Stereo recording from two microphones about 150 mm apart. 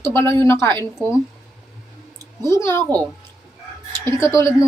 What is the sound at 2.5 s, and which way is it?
Speech, 20° left (ahead or behind).